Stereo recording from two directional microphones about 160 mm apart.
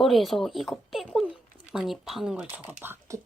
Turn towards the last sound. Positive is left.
turn(degrees=-15)  # may be behind; listen again after turning